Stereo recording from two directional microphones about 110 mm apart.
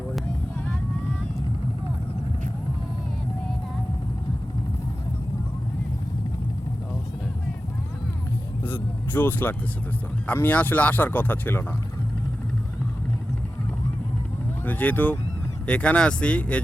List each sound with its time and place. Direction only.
8.6 s vehicle: 20° left (ahead or behind)
10.2 s speech: 15° left (ahead or behind)
14.6 s speech: 15° left (ahead or behind)